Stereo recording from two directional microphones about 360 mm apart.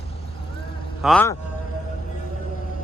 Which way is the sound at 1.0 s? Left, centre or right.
Centre.